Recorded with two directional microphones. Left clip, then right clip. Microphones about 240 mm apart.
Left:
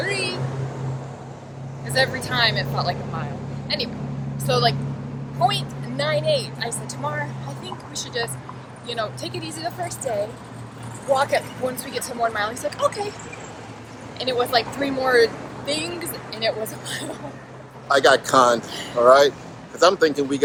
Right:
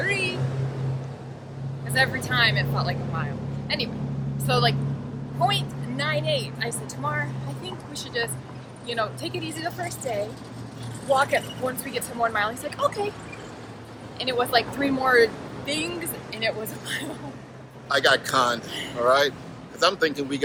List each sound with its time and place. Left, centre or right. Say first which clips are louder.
0.0 s vehicle: even; centre
2.2 s speech: left 1 dB; centre
11.1 s speech: left 2 dB; centre
14.2 s speech: left 2 dB; centre
17.8 s speech: left 4 dB; centre